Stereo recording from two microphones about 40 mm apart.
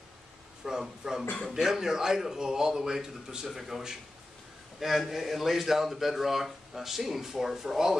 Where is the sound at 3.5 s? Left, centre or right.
Centre.